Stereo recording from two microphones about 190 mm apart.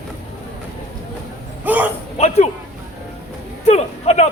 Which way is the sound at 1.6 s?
10° right (ahead or behind).